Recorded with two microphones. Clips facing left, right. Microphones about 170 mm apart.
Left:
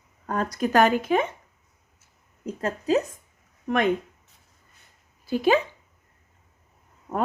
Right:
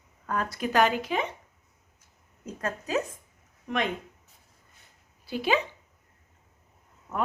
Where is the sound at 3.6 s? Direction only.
50° left (ahead or behind).